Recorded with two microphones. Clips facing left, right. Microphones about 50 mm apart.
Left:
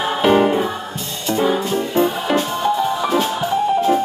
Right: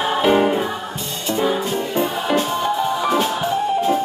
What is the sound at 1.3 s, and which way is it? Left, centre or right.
Music, left.